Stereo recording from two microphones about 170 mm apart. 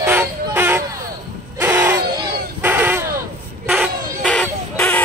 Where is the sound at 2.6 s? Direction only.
10° right (ahead or behind).